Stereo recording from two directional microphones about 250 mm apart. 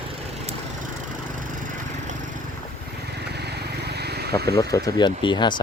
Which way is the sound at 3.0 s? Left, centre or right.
Right.